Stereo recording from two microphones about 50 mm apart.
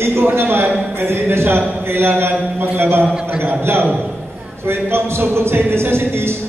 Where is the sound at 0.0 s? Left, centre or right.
Right.